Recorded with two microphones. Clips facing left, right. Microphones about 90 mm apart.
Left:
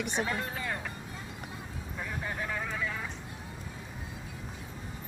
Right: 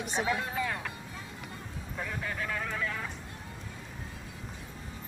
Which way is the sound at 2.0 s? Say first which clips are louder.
Even; 20° left (ahead or behind).